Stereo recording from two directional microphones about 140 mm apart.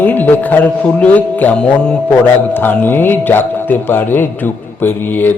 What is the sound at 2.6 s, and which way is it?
A man's voice, 15° left (ahead or behind).